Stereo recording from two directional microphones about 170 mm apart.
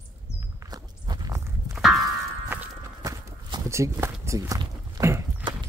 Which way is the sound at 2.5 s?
10° right (ahead or behind).